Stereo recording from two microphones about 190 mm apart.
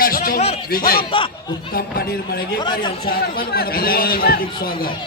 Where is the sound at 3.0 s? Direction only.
50° left (ahead or behind).